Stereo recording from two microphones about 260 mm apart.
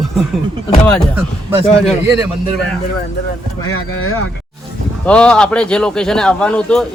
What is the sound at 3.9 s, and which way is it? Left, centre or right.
Speech, left.